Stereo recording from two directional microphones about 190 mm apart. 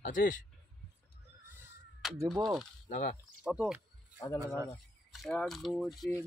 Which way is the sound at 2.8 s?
40° left (ahead or behind).